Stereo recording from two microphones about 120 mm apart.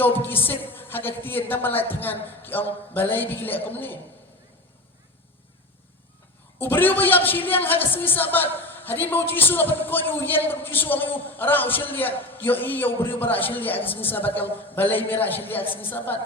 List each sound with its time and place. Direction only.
0.3 s a man's voice: 15° left (ahead or behind)
6.6 s a man's voice: 15° left (ahead or behind)